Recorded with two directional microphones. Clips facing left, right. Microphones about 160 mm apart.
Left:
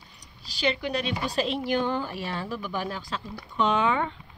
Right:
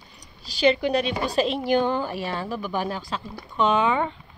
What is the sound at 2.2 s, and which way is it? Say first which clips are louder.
Speech: right 3 dB; 40° right (ahead or behind).